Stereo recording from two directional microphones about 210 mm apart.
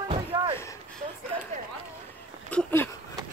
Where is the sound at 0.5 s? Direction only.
15° left (ahead or behind).